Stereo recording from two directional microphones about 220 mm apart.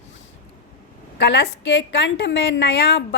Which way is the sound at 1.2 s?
50° left (ahead or behind).